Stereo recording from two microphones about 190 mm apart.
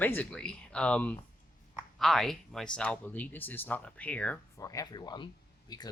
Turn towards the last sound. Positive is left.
turn(degrees=20)  # may be behind; listen again after turning